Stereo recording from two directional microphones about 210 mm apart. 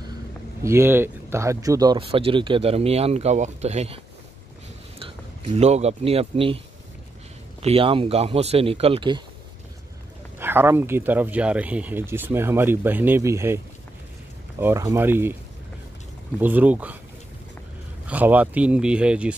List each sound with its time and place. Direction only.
0.7 s speech: 10° right (ahead or behind); by 6.6 s 25° right (ahead or behind)
7.6 s speech: 25° right (ahead or behind)
10.4 s speech: 10° right (ahead or behind)
14.6 s speech: 15° right (ahead or behind)
16.3 s speech: 10° right (ahead or behind)
18.0 s speech: 10° right (ahead or behind)